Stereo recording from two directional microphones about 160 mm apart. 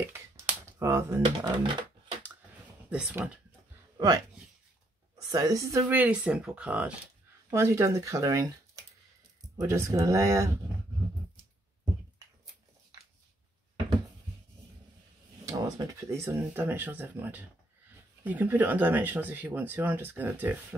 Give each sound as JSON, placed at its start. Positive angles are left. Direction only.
{"t": 0.7, "sound": "speech", "side_deg": -15}
{"t": 1.2, "sound": "speech", "side_deg": -30}
{"t": 2.9, "sound": "speech", "side_deg": -10}
{"t": 5.1, "sound": "speech", "side_deg": -20}
{"t": 15.5, "sound": "speech", "side_deg": -20}